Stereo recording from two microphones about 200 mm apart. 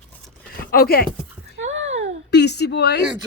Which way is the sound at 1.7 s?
70° right (ahead or behind).